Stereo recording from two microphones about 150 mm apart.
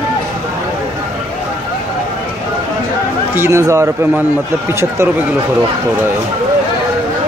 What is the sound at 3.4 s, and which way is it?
Speech, 20° right (ahead or behind).